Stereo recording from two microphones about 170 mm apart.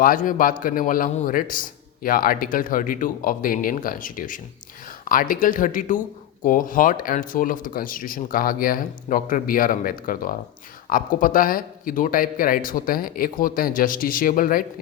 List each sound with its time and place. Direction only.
0.0 s speech: 55° left (ahead or behind)